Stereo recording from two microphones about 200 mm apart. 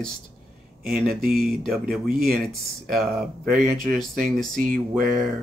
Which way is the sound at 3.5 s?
Centre (ahead or behind).